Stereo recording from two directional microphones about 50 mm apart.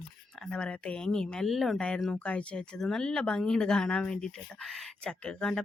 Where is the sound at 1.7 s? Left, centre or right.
Centre.